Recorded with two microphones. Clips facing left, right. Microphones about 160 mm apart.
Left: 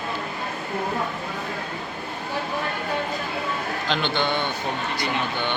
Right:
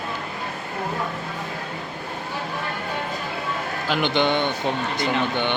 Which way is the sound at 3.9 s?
15° right (ahead or behind).